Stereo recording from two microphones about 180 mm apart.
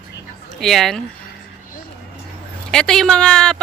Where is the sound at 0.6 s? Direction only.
Centre (ahead or behind).